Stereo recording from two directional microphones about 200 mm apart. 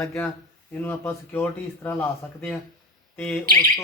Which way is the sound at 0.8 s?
10° left (ahead or behind).